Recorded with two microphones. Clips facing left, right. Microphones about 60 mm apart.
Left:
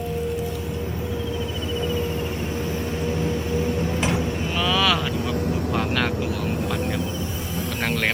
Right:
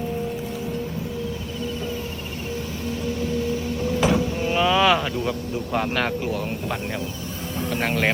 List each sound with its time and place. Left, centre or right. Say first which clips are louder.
4.5 s vehicle: right 4 dB; right
7.9 s speech: right 1 dB; centre